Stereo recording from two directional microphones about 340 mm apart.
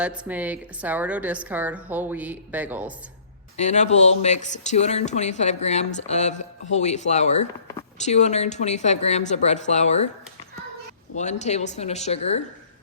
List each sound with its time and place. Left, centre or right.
0.0 s a woman's voice: centre
3.6 s speech: centre
11.1 s speech: left